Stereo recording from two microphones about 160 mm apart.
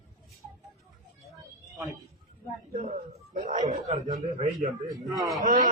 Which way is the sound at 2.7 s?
40° right (ahead or behind).